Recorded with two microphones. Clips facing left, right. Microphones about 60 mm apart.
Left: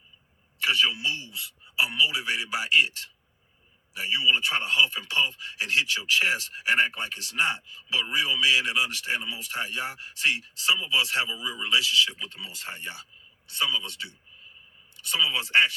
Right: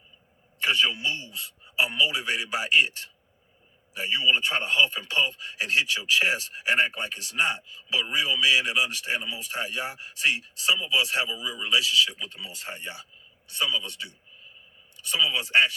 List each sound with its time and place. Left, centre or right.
0.6 s a sound: right
0.9 s a man's voice: centre
3.9 s a man's voice: centre
15.1 s speech: centre